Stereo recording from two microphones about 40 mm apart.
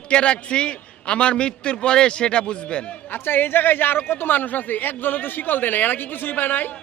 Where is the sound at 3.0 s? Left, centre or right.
Left.